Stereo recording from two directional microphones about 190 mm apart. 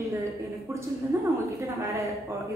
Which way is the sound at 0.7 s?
15° right (ahead or behind).